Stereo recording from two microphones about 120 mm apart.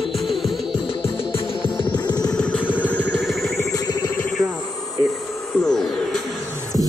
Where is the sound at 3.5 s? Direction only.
30° left (ahead or behind).